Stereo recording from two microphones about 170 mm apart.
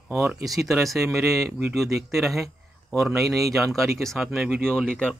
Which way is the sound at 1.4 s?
15° right (ahead or behind).